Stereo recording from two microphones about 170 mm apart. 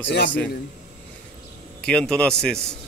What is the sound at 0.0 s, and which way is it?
Speech, 90° left.